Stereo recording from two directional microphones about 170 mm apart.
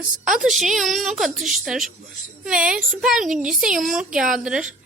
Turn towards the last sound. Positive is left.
turn(degrees=-5)  # may be behind; listen again after turning